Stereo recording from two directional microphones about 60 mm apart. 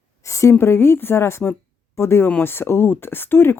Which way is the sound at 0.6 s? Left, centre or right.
Left.